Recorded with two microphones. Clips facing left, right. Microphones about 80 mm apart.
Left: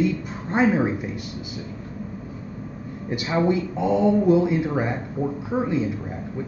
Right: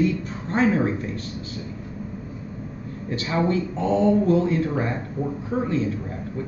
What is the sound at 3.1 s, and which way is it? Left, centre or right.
Speech, centre.